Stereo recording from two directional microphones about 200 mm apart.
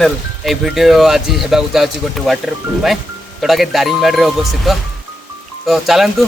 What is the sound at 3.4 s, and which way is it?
Speech, centre (ahead or behind).